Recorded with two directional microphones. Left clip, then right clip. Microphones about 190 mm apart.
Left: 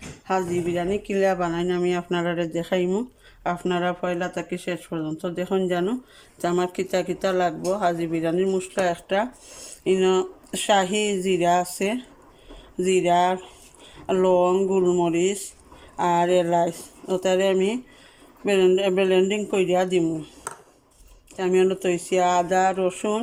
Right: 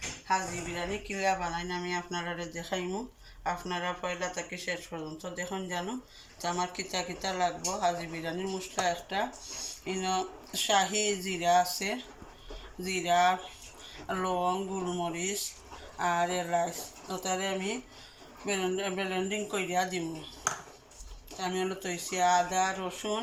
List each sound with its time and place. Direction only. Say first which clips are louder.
0.3 s speech: left 7 dB; 70° left (ahead or behind)
21.3 s speech: left 12 dB; 60° left (ahead or behind)